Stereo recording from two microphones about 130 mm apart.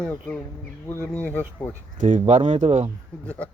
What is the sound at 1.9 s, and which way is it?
Speech, 70° right (ahead or behind).